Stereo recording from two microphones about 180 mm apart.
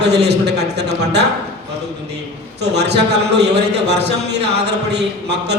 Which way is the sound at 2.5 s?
65° right (ahead or behind).